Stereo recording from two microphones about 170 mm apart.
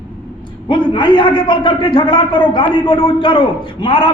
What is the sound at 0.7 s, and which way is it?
A man's voice, 30° left (ahead or behind).